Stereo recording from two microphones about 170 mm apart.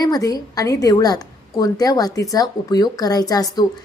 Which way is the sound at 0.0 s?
20° left (ahead or behind).